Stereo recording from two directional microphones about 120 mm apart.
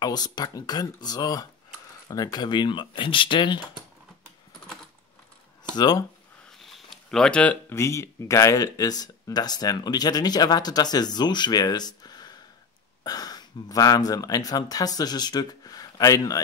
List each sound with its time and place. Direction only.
0.0 s speech: 35° left (ahead or behind)
5.7 s speech: 35° left (ahead or behind)
6.6 s a sound: 5° left (ahead or behind)
7.7 s speech: 25° left (ahead or behind)